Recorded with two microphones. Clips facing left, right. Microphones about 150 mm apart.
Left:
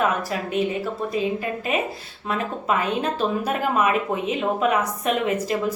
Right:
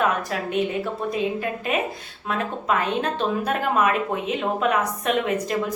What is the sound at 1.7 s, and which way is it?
A woman's voice, centre (ahead or behind).